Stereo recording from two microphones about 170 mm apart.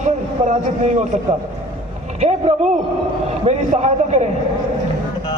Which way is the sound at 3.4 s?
45° right (ahead or behind).